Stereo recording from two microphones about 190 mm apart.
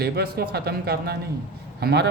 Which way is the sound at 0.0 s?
55° right (ahead or behind).